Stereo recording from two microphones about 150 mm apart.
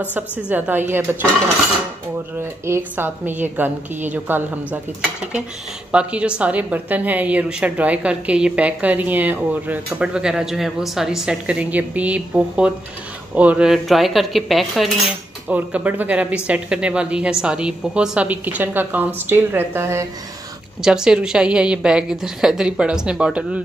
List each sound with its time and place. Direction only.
0.1 s a woman's voice: 10° right (ahead or behind)
2.6 s a woman's voice: 15° right (ahead or behind)
5.9 s a woman's voice: 5° right (ahead or behind)
20.8 s a woman's voice: 5° right (ahead or behind)